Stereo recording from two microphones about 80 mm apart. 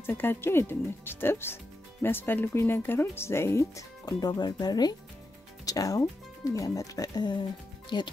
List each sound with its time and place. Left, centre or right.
0.0 s speech: left
4.0 s speech: left